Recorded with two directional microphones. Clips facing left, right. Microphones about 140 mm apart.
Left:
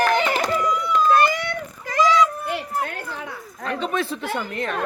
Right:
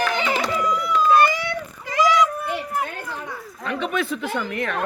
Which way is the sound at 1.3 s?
50° left (ahead or behind).